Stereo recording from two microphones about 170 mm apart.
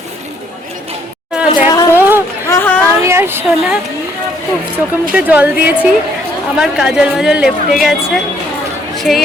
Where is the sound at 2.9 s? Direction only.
15° right (ahead or behind).